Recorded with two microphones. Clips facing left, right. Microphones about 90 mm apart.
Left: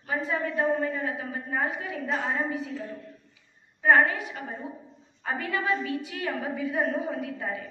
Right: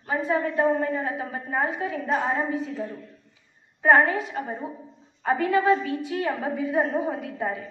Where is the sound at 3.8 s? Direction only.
30° right (ahead or behind).